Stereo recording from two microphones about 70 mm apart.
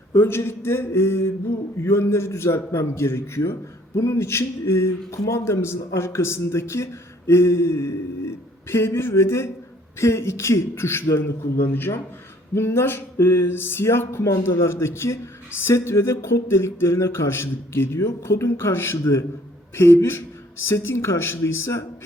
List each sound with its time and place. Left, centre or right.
0.1 s speech: left
5.1 s a man's voice: left
5.5 s speech: left